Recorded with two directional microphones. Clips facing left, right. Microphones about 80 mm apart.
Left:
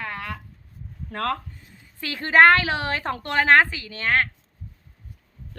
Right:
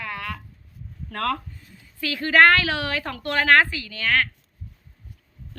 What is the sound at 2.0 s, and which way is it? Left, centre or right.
A woman's voice, left.